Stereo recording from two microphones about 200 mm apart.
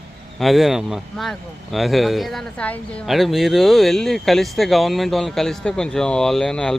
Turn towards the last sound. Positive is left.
turn(degrees=5)  # may be behind; listen again after turning